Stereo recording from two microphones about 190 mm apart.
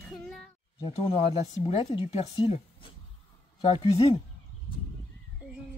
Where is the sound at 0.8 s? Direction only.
30° left (ahead or behind).